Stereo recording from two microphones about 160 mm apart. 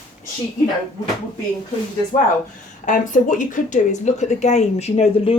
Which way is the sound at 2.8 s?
55° left (ahead or behind).